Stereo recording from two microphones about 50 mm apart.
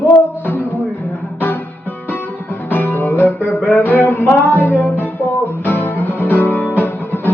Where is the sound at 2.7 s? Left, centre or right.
Left.